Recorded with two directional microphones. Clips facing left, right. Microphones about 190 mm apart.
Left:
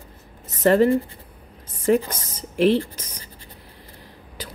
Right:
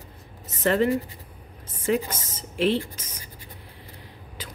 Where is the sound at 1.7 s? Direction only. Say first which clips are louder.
Left 5 dB; 40° left (ahead or behind).